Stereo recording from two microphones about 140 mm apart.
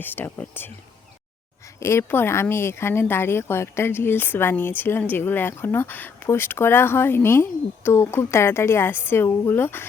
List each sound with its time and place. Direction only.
0.0 s speech: 15° left (ahead or behind)
1.8 s speech: 20° left (ahead or behind)